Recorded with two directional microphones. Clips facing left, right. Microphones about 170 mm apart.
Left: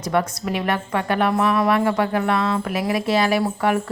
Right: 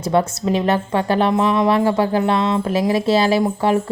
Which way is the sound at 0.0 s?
30° right (ahead or behind).